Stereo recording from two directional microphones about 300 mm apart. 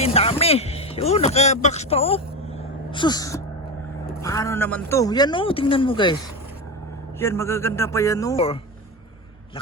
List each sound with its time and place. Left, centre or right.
0.0 s a man's voice: centre
7.2 s a man's voice: centre